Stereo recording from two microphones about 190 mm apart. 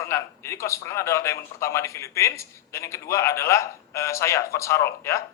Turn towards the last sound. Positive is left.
turn(degrees=15)  # may be behind; listen again after turning